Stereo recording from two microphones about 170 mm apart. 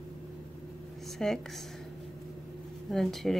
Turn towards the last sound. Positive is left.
turn(degrees=0)  # may be behind; listen again after turning